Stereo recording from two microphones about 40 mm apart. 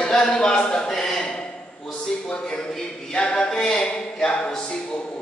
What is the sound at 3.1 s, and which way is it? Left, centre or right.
Speech, left.